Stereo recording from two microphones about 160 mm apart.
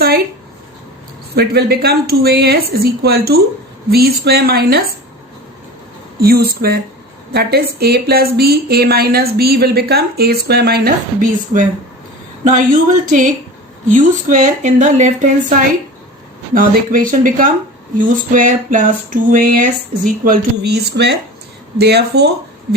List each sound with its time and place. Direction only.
1.4 s speech: 80° right
6.1 s speech: 70° right (ahead or behind)
12.5 s a sound: 55° right (ahead or behind)
13.8 s speech: 55° right (ahead or behind)
16.6 s a sound: 60° right (ahead or behind); by 21.2 s 90° right
21.8 s speech: 90° right